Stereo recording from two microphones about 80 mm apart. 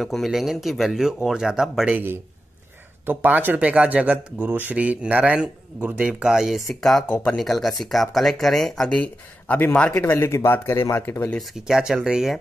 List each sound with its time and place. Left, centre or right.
0.0 s speech: centre
1.9 s a man's voice: right; by 8.9 s centre
8.9 s speech: left
9.9 s speech: left
11.3 s speech: centre